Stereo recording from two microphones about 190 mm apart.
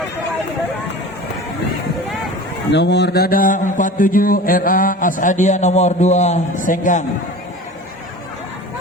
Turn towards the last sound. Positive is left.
turn(degrees=45)  # may be behind; listen again after turning